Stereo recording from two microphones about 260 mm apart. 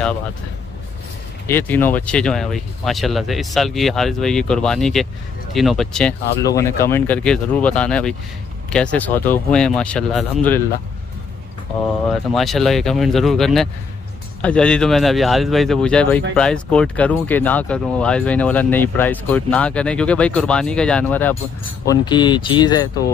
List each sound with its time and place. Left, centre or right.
1.5 s speech: centre
12.3 s speech: centre